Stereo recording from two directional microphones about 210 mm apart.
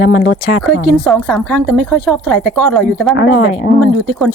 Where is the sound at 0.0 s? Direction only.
50° left (ahead or behind).